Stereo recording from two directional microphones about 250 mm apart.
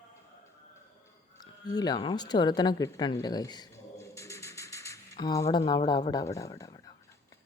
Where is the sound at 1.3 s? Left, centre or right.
Centre.